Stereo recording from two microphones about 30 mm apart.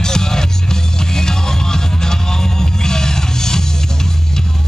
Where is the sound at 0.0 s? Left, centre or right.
Left.